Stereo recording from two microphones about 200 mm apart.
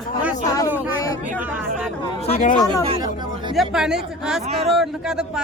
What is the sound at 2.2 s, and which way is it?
Speech, 35° left (ahead or behind).